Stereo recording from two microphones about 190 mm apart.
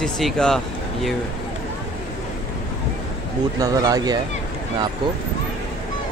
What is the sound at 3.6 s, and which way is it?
Speech, 20° right (ahead or behind).